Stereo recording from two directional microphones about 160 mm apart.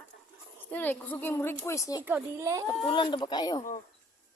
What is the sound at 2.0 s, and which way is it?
Speech, 15° right (ahead or behind).